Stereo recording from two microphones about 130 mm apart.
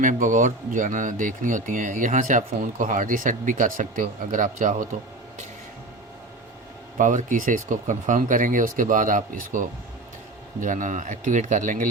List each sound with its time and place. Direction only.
0.0 s speech: 80° right
7.0 s speech: 85° right